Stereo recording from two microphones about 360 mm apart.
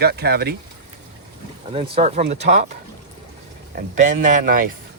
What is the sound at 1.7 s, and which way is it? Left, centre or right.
Speech, centre.